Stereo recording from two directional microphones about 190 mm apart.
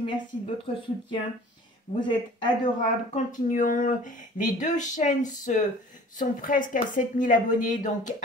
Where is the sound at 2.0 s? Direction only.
25° left (ahead or behind).